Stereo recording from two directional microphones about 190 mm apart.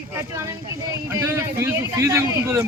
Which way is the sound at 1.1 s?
15° right (ahead or behind).